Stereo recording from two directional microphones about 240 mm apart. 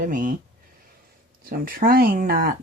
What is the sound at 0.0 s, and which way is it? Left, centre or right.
Speech, right.